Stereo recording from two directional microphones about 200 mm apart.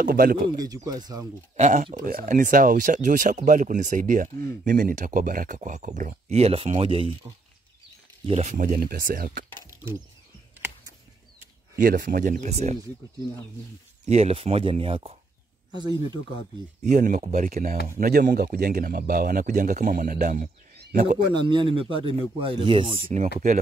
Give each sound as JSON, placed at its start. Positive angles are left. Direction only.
{"t": 0.0, "sound": "speech", "side_deg": -45}
{"t": 0.6, "sound": "speech", "side_deg": -20}
{"t": 1.6, "sound": "speech", "side_deg": -35}
{"t": 8.3, "sound": "speech", "side_deg": -35}
{"t": 11.7, "sound": "speech", "side_deg": -50}
{"t": 14.0, "sound": "speech", "side_deg": -30}
{"t": 16.8, "sound": "speech", "side_deg": -40}
{"t": 21.3, "sound": "speech", "side_deg": -25}
{"t": 23.0, "sound": "speech", "side_deg": -40}